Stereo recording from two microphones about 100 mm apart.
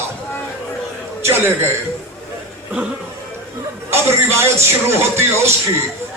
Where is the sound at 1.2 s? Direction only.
25° right (ahead or behind).